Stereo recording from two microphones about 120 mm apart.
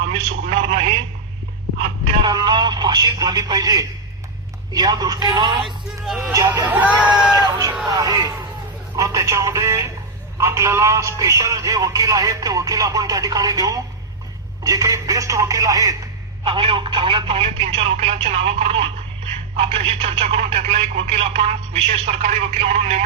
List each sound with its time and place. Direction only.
0.1 s a sound: 60° right (ahead or behind)
2.2 s radio: 35° right (ahead or behind)
4.7 s speech: 35° right (ahead or behind)
5.6 s speech: centre (ahead or behind)
6.7 s speech: 10° right (ahead or behind)
7.3 s a man's voice: 30° right (ahead or behind)
16.4 s speech: 50° right (ahead or behind); by 18.2 s 65° right (ahead or behind)
18.2 s speech: 55° right (ahead or behind)